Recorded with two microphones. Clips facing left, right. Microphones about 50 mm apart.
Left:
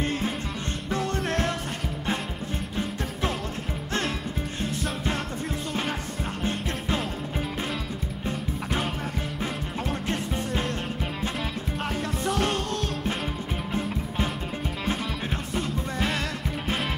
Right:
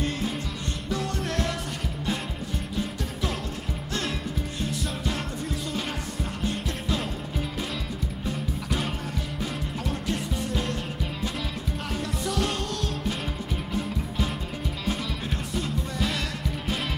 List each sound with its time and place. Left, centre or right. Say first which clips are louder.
1.1 s music: left 2 dB; left
12.3 s music: left 2 dB; left
15.5 s music: left 1 dB; left